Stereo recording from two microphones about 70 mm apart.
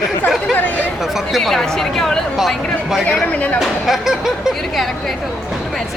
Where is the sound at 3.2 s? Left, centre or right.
Left.